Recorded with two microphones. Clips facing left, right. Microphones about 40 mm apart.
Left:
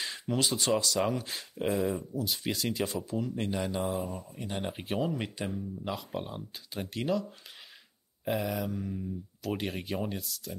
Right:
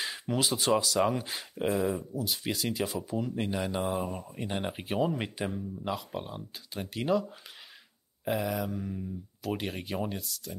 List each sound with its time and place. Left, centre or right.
0.0 s speech: centre
4.1 s speech: right
4.6 s speech: centre
7.1 s speech: centre
8.3 s speech: centre